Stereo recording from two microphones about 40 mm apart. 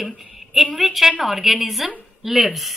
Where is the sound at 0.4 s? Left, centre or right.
Centre.